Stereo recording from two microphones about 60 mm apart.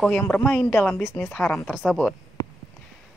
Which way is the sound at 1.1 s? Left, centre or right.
Left.